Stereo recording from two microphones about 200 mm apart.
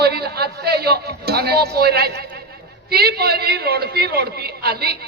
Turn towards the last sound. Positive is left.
turn(degrees=-50)  # may be behind; listen again after turning